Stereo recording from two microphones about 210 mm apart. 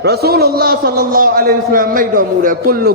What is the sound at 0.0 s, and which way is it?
A man's voice, 50° right (ahead or behind).